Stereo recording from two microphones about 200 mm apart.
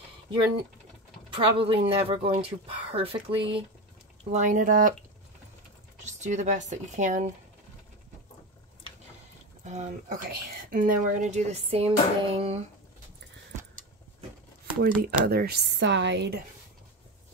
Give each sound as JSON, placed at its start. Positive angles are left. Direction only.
{"t": 1.3, "sound": "a woman's voice", "side_deg": -25}
{"t": 6.0, "sound": "a woman's voice", "side_deg": -35}
{"t": 9.7, "sound": "a woman's voice", "side_deg": -35}
{"t": 15.0, "sound": "speech", "side_deg": -50}